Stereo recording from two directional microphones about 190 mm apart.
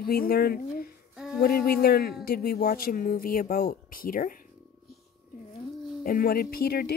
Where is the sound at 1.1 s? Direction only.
Centre (ahead or behind).